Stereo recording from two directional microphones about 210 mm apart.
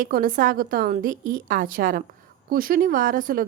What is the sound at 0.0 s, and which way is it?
A woman's voice, 45° right (ahead or behind).